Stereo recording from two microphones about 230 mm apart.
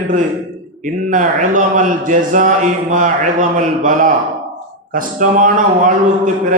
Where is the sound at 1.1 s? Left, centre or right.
Right.